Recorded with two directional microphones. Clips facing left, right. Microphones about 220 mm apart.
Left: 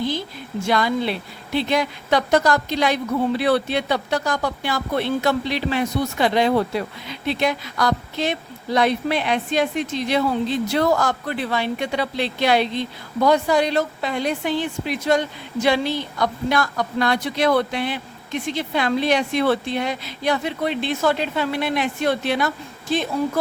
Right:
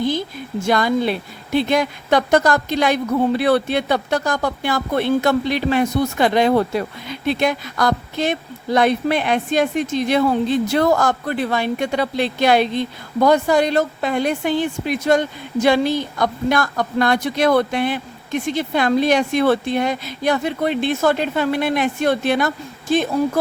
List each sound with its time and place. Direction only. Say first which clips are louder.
0.6 s a woman's voice: right 3 dB; 45° right (ahead or behind)